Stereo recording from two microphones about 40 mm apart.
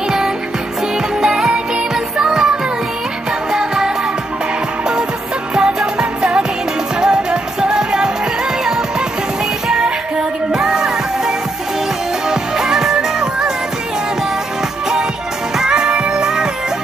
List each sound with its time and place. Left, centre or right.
1.2 s music: centre
3.5 s music: centre
5.5 s music: centre
9.8 s music: right
15.5 s music: centre